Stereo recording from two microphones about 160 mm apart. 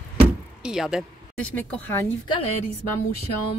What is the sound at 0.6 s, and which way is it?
Speech, 5° right (ahead or behind).